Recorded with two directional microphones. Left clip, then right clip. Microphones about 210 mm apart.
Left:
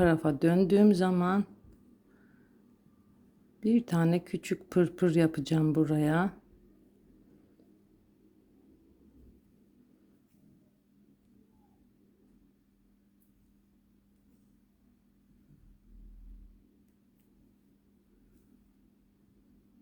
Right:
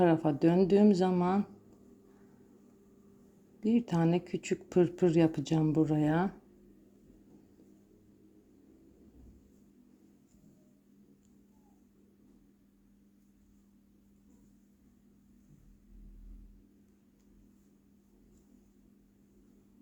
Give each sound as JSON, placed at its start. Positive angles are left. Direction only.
{"t": 0.0, "sound": "speech", "side_deg": 15}
{"t": 3.6, "sound": "speech", "side_deg": 15}